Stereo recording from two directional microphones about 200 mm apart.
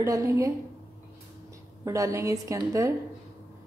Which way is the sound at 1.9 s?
15° right (ahead or behind).